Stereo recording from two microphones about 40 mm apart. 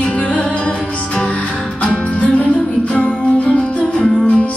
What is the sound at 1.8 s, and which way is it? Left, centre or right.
Music, left.